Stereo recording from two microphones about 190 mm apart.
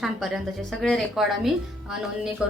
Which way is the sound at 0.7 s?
Centre (ahead or behind).